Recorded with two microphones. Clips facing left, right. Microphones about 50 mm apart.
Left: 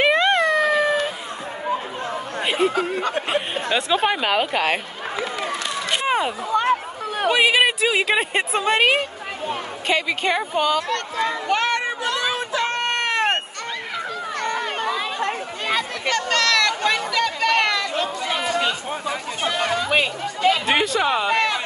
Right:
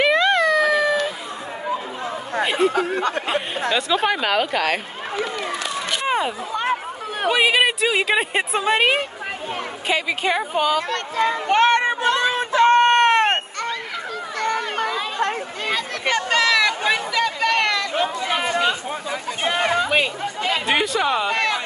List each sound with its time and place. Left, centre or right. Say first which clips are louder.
0.0 s a sound: even; left
2.7 s speech: right 2 dB; right
3.3 s speech: even; left
4.1 s a woman's voice: even; centre
6.0 s a woman's voice: even; centre
10.9 s a sound: right 2 dB; right
16.1 s a sound: right 2 dB; centre
17.9 s chatter: right 2 dB; right
20.6 s speech: even; centre